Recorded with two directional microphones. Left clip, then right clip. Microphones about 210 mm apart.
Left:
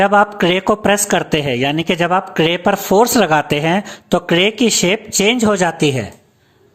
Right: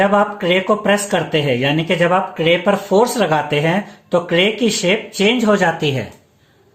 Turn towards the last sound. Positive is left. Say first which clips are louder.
# left 1 dB
turn(degrees=35)  # may be behind; listen again after turning